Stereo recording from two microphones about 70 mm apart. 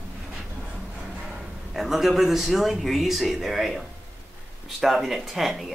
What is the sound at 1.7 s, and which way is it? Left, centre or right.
A man's voice, centre.